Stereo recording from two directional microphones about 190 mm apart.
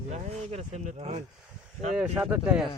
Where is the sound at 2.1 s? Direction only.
5° right (ahead or behind).